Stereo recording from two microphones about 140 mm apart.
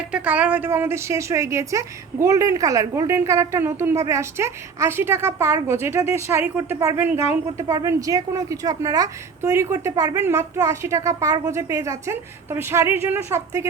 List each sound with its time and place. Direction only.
0.1 s a woman's voice: 10° right (ahead or behind)